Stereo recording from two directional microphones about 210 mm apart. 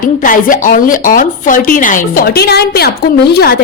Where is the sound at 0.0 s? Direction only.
40° left (ahead or behind).